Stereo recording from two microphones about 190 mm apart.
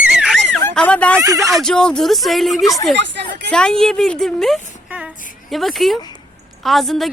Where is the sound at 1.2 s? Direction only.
15° right (ahead or behind).